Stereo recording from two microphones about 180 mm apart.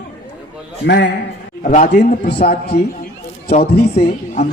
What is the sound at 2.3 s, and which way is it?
Speech, 65° left (ahead or behind).